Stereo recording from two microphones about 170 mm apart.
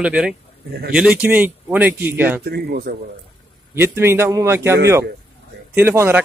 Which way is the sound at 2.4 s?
70° right (ahead or behind).